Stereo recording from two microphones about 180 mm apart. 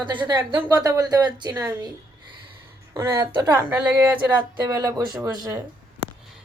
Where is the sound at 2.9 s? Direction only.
20° right (ahead or behind).